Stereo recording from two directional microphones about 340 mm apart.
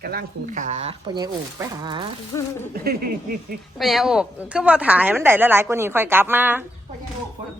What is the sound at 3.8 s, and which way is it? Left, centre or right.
A woman's voice, centre.